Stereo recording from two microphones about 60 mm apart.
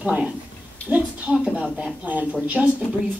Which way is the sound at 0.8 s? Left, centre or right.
Right.